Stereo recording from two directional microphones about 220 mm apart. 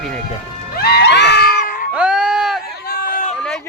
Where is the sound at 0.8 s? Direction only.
50° left (ahead or behind).